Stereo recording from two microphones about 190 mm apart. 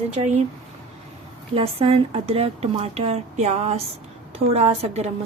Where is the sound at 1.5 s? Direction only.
30° right (ahead or behind).